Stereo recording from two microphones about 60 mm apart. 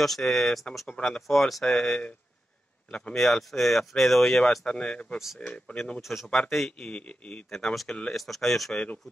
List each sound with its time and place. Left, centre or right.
0.0 s speech: centre
1.2 s speech: centre
3.2 s speech: centre
5.9 s speech: centre
6.5 s speech: centre
7.5 s speech: centre
8.7 s speech: left